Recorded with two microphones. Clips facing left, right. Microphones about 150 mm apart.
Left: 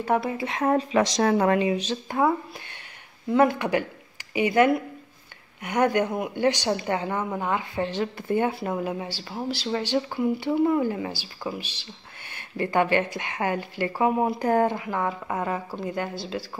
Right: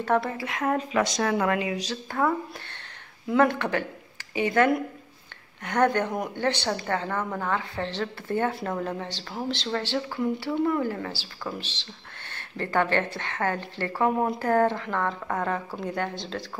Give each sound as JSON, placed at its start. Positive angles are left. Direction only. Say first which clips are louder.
{"t": 0.0, "sound": "speech", "louder": "left 1 dB", "side_deg": 15}
{"t": 3.3, "sound": "speech", "louder": "left 2 dB", "side_deg": 10}